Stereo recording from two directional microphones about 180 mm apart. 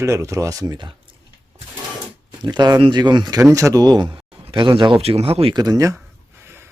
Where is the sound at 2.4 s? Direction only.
25° right (ahead or behind).